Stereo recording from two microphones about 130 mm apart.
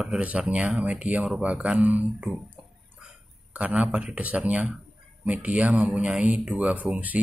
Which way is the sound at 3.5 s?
10° right (ahead or behind).